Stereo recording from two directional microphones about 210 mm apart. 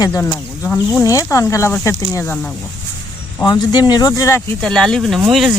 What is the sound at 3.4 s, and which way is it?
Speech, 20° left (ahead or behind).